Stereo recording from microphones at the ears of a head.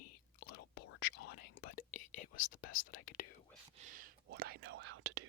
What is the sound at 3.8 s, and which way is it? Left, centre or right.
Speech, right.